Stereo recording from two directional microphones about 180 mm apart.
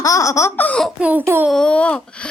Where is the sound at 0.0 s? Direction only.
20° left (ahead or behind); by 1.5 s 5° right (ahead or behind).